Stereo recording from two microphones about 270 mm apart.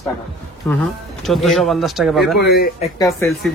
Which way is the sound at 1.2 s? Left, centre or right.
Centre.